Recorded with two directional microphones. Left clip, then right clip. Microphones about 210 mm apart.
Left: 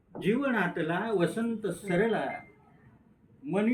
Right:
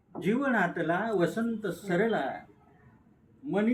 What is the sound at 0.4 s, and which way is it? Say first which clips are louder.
Speech: right 2 dB; 20° right (ahead or behind).